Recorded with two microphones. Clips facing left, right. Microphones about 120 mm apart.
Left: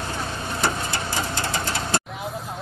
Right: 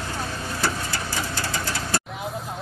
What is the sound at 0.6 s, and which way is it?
Printer, 25° left (ahead or behind).